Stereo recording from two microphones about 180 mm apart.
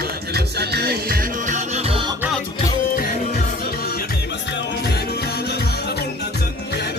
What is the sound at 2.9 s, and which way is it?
Music, 50° left (ahead or behind).